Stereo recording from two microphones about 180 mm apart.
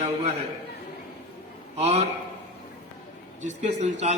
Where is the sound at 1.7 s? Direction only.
35° right (ahead or behind).